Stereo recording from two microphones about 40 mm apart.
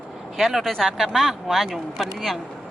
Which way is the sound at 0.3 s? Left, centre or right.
Centre.